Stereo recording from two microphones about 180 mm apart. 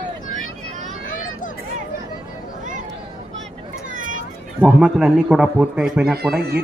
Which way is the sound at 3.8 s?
45° right (ahead or behind).